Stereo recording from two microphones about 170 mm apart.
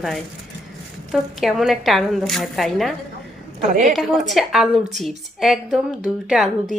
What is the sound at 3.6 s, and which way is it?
Speech, 50° right (ahead or behind).